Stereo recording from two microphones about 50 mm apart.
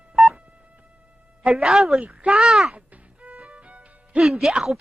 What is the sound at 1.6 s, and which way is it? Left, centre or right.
Speech, centre.